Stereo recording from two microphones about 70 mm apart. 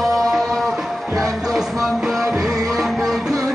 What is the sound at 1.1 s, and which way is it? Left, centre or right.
Music, right.